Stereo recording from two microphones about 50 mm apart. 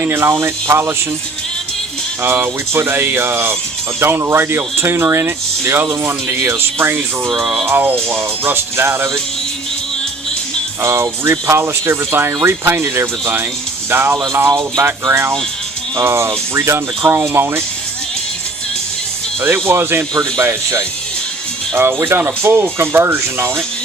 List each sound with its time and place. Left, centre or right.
0.0 s speech: right
2.2 s speech: right
7.3 s music: centre
7.7 s speech: right
10.8 s speech: right
16.0 s speech: right
19.4 s speech: right